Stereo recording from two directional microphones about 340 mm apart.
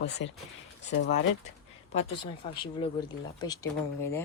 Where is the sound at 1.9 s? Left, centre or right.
Centre.